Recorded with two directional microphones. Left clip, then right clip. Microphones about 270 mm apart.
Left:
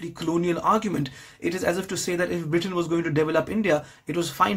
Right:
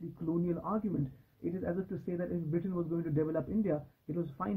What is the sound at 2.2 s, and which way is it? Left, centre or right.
Speech, centre.